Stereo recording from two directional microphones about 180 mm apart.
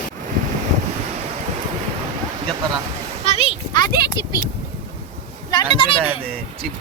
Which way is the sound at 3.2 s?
35° left (ahead or behind).